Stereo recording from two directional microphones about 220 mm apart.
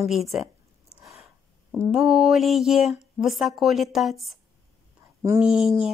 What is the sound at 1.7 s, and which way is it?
A woman's voice, 5° right (ahead or behind).